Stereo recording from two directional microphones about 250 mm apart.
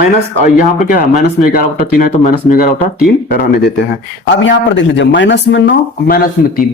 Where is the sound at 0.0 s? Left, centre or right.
Left.